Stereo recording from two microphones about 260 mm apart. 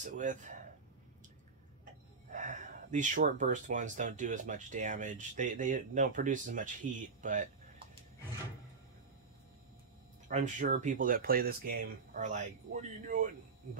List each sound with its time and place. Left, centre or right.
0.0 s speech: right
2.3 s speech: right
10.2 s speech: right